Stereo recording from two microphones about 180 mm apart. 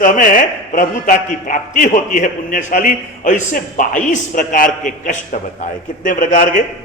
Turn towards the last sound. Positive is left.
turn(degrees=45)  # may be behind; listen again after turning